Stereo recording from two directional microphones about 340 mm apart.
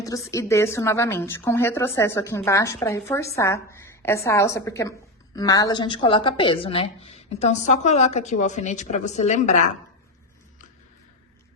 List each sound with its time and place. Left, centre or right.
0.0 s a woman's voice: centre